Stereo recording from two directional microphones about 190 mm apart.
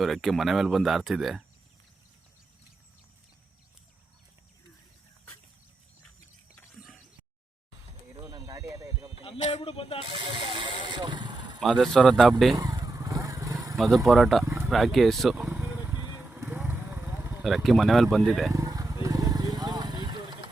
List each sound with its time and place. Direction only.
0.0 s speech: centre (ahead or behind)
8.2 s a sound: 20° right (ahead or behind)
9.5 s speech: 30° left (ahead or behind)
10.1 s vehicle: 25° right (ahead or behind)
11.6 s speech: centre (ahead or behind)
12.5 s vehicle: 20° right (ahead or behind)
13.7 s speech: centre (ahead or behind)
14.4 s speech: 15° right (ahead or behind)
14.7 s vehicle: centre (ahead or behind); by 17.3 s 15° right (ahead or behind)
17.4 s speech: centre (ahead or behind)
18.5 s vehicle: 20° right (ahead or behind)